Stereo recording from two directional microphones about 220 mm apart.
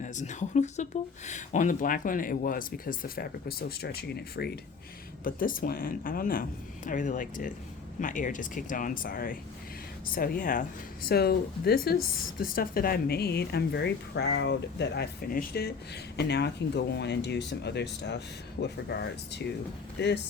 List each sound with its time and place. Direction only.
0.0 s speech: 35° left (ahead or behind); by 20.1 s 50° left (ahead or behind)